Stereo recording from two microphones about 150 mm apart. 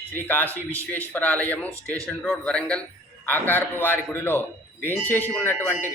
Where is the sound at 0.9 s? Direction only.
10° left (ahead or behind).